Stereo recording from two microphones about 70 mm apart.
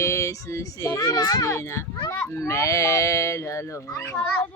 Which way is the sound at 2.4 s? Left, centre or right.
Left.